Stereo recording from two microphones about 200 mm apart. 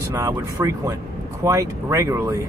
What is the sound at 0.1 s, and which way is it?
Speech, 15° right (ahead or behind).